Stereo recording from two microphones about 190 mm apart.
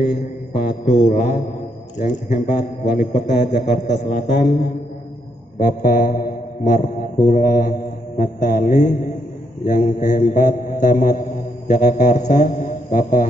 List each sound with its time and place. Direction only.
0.0 s mantra: 55° left (ahead or behind)
0.9 s a man's voice: 40° left (ahead or behind)
4.4 s mantra: 55° left (ahead or behind)
5.6 s mantra: 45° left (ahead or behind)
7.2 s speech: 45° left (ahead or behind)
9.7 s mantra: 40° left (ahead or behind)